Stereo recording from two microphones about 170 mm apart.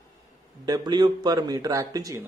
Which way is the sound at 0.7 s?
25° right (ahead or behind).